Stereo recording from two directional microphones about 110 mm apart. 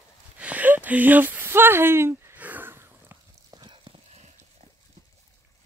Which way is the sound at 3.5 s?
40° right (ahead or behind).